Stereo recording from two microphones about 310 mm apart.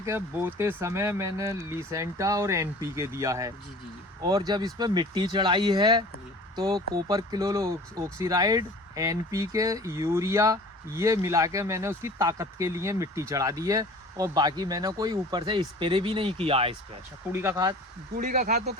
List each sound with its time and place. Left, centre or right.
0.0 s speech: centre
18.1 s speech: right